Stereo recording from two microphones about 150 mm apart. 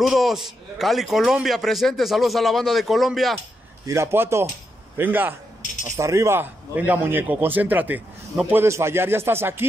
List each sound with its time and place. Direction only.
0.0 s a man's voice: centre (ahead or behind)
3.8 s a man's voice: 20° right (ahead or behind)